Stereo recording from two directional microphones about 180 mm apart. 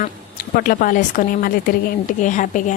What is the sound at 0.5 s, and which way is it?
A woman's voice, 50° left (ahead or behind).